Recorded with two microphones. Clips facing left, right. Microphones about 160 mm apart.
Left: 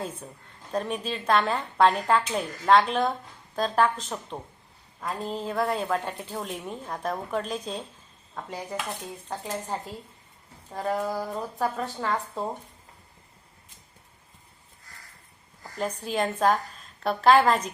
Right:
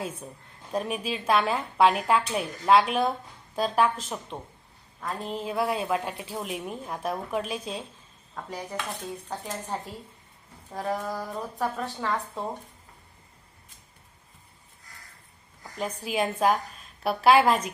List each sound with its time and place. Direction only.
0.0 s speech: 10° right (ahead or behind)
15.6 s speech: 5° right (ahead or behind)